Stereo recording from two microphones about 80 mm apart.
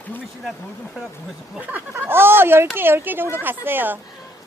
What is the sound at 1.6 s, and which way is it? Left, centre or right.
Speech, right.